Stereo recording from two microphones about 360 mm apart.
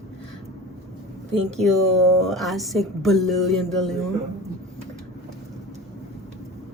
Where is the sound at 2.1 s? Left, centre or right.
Centre.